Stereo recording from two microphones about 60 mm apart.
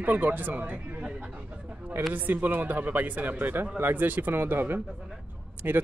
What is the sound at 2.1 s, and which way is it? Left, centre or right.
Speech, right.